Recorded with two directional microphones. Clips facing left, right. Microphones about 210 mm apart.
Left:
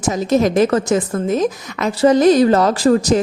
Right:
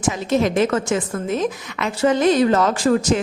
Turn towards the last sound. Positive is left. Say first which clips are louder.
# left 4 dB
turn(degrees=35)  # may be behind; listen again after turning